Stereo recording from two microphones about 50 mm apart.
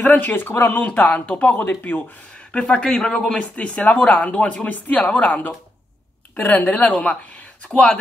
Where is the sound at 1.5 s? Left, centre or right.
Left.